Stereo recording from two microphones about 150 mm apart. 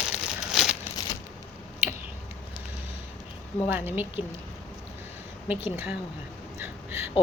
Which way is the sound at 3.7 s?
15° right (ahead or behind).